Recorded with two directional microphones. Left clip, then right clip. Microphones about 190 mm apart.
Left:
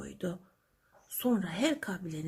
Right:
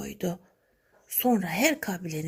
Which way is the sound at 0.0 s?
15° right (ahead or behind).